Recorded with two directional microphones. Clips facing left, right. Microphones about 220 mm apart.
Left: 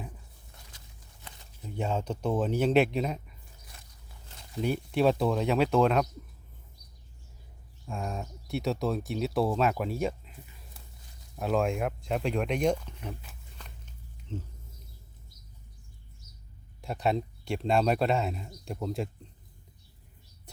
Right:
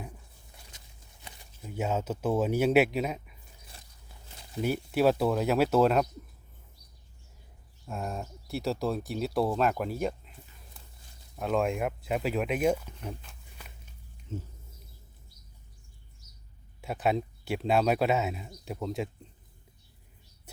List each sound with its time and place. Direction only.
1.2 s speech: 5° right (ahead or behind)
3.7 s biting: 30° right (ahead or behind)
4.6 s speech: 5° right (ahead or behind)
7.9 s speech: 5° right (ahead or behind)
11.3 s speech: centre (ahead or behind)
14.3 s speech: 5° right (ahead or behind)
16.8 s speech: 5° right (ahead or behind)